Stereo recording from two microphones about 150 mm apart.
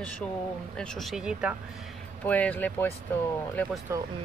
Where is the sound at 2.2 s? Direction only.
10° left (ahead or behind).